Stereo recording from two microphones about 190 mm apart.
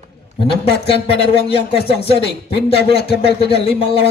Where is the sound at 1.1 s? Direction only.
30° left (ahead or behind).